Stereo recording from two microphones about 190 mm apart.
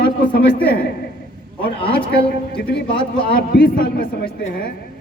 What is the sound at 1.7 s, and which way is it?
Speech, 30° left (ahead or behind).